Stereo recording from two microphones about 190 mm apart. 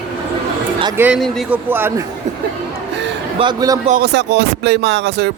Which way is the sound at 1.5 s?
10° right (ahead or behind).